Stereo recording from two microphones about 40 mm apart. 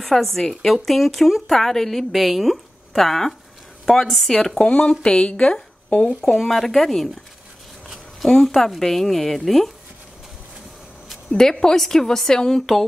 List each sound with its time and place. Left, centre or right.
0.0 s a woman's voice: centre
4.6 s speech: left
6.2 s speech: centre
8.3 s a woman's voice: centre
11.2 s a woman's voice: centre